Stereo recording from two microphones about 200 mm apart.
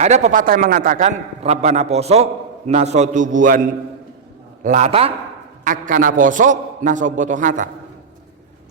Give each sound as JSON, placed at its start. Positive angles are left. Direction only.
{"t": 0.0, "sound": "a man's voice", "side_deg": -35}
{"t": 5.6, "sound": "a man's voice", "side_deg": -40}